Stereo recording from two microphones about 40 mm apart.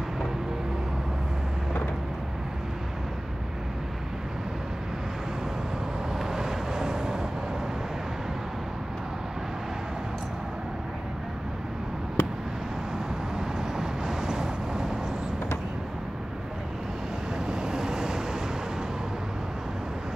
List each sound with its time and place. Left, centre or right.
6.3 s vehicle: centre
12.2 s a sound: left
13.4 s vehicle: centre
17.5 s vehicle: centre